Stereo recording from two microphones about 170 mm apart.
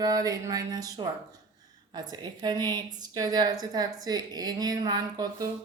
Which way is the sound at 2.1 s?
25° right (ahead or behind).